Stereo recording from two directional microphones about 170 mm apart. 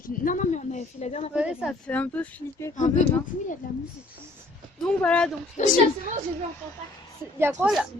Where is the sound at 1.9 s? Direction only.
10° left (ahead or behind).